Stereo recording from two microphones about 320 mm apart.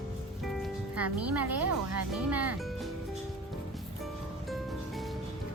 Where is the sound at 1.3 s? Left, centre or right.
Right.